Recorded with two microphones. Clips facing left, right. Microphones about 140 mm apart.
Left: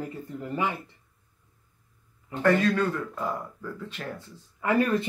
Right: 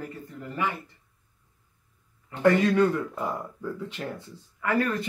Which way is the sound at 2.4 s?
15° right (ahead or behind).